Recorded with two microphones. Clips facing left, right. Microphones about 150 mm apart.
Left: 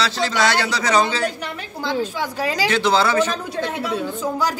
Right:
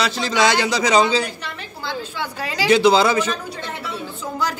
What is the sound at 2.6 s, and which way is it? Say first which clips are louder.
Speech: right 5 dB; 10° right (ahead or behind).